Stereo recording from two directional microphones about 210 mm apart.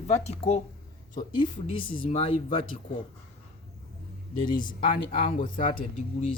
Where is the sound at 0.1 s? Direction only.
30° left (ahead or behind).